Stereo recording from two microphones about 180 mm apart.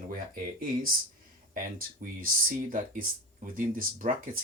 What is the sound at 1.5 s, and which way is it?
Speech, 50° right (ahead or behind).